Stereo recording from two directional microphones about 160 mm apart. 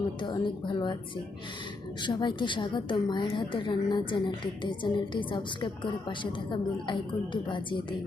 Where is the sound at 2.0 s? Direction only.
30° left (ahead or behind).